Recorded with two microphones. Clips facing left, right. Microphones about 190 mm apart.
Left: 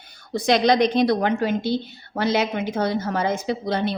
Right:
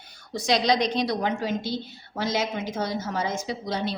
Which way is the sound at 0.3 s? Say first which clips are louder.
Left 5 dB; 55° left (ahead or behind).